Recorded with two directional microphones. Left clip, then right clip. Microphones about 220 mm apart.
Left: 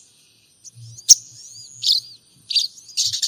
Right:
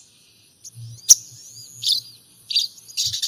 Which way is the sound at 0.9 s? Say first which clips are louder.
Left 2 dB; 15° left (ahead or behind).